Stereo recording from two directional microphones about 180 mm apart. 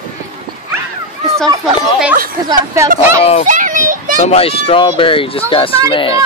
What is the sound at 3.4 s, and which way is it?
Children playing, 45° right (ahead or behind).